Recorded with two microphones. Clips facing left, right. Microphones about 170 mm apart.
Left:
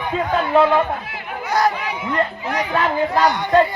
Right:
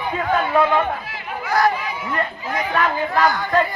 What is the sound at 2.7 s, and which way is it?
Speech, 25° left (ahead or behind).